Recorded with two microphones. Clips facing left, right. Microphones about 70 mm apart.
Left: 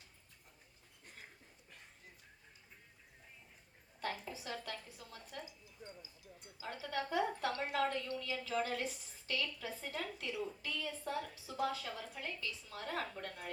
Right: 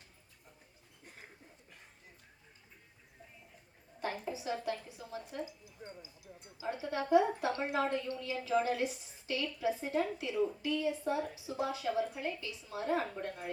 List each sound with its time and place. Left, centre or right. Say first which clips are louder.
4.0 s a sound: right 5 dB; right
4.5 s a woman's voice: right 8 dB; right
5.8 s speech: right 4 dB; right
6.6 s a woman's voice: right 4 dB; right